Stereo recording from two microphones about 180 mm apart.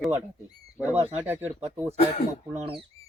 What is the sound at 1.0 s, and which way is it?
Speech, 10° right (ahead or behind).